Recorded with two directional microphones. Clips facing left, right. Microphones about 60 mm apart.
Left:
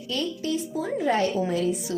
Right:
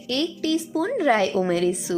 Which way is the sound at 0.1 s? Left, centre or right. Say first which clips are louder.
Right 4 dB; right.